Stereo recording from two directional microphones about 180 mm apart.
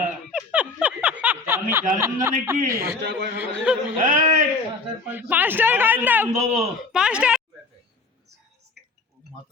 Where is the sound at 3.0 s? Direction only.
75° right (ahead or behind).